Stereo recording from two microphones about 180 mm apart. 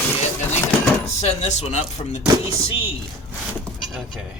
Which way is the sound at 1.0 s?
40° left (ahead or behind).